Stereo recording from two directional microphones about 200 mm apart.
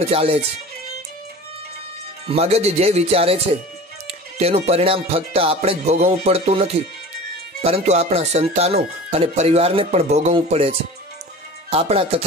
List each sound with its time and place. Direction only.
0.0 s speech: 30° right (ahead or behind)
2.2 s speech: 30° right (ahead or behind)